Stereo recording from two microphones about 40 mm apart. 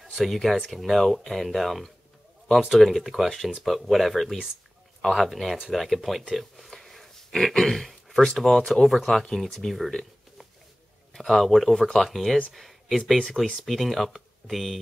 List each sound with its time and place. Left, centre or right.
0.0 s speech: centre
11.1 s speech: centre